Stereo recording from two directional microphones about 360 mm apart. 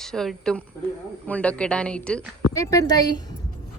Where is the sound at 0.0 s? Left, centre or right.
Centre.